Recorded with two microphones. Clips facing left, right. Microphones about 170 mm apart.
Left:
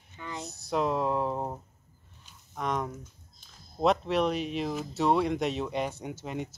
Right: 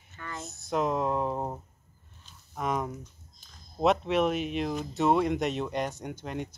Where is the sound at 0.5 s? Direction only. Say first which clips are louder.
Even; centre (ahead or behind).